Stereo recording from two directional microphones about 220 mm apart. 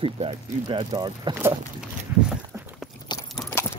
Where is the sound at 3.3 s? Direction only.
Centre (ahead or behind).